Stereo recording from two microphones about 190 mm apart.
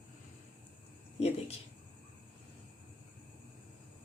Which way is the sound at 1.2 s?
35° left (ahead or behind).